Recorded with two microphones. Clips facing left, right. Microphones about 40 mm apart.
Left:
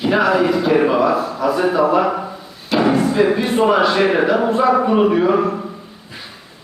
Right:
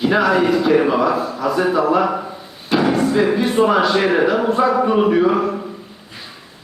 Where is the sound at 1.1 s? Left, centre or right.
Left.